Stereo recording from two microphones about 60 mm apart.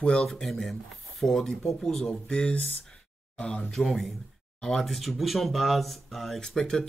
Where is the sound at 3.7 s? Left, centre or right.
Centre.